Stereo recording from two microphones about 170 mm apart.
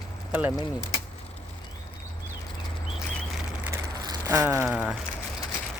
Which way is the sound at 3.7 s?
15° right (ahead or behind).